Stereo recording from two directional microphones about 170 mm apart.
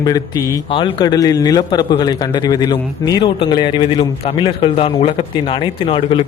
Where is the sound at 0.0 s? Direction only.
20° left (ahead or behind).